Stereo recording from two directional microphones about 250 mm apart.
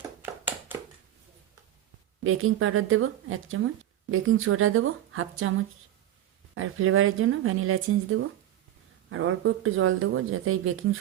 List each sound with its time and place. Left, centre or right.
0.2 s tap: centre
2.2 s a woman's voice: right